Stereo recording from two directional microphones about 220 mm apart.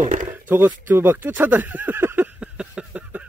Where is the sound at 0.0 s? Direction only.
35° right (ahead or behind).